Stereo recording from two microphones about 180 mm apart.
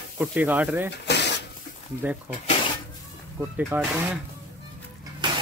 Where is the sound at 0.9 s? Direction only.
70° left (ahead or behind).